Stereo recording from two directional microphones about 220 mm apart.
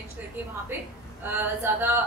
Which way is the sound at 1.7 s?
10° right (ahead or behind).